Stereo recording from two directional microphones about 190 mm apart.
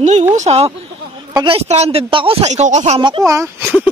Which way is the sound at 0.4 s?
35° right (ahead or behind).